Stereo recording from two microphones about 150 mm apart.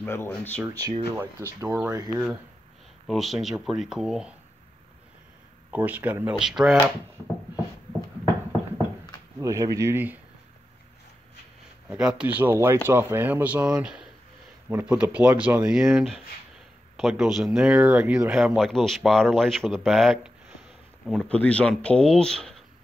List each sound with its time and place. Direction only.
0.0 s speech: 15° left (ahead or behind)
0.6 s speech: 25° right (ahead or behind)
2.0 s speech: centre (ahead or behind)
5.7 s speech: 10° right (ahead or behind)
9.4 s speech: 20° right (ahead or behind)
11.9 s speech: 5° right (ahead or behind)